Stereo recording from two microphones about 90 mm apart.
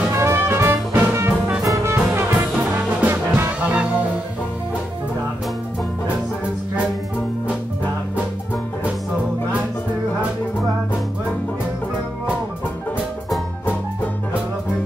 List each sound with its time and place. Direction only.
0.1 s music: 30° right (ahead or behind)
2.7 s brass instrument: 25° right (ahead or behind)
3.6 s music: 15° right (ahead or behind)